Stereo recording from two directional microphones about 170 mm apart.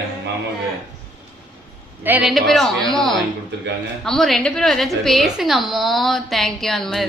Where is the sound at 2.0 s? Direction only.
10° right (ahead or behind).